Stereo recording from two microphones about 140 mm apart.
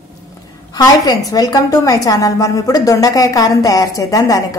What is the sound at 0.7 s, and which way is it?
A woman's voice, 25° left (ahead or behind).